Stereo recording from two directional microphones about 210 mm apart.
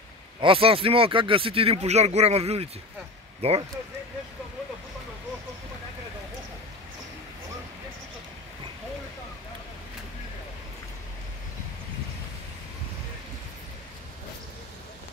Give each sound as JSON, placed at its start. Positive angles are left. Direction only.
{"t": 0.4, "sound": "speech", "side_deg": -25}